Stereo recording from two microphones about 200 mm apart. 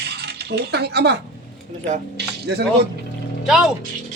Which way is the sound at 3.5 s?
Centre (ahead or behind).